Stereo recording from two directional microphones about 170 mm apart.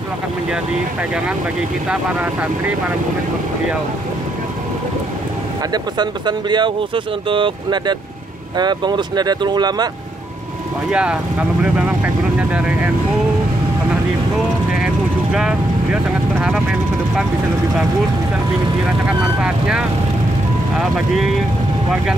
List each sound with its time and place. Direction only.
5.7 s speech: 25° right (ahead or behind)
10.9 s speech: 5° right (ahead or behind)
15.3 s speech: 5° right (ahead or behind)
19.4 s speech: 5° right (ahead or behind)